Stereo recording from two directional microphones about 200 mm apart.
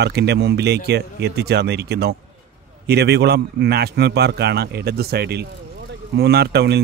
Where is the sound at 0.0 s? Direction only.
55° right (ahead or behind).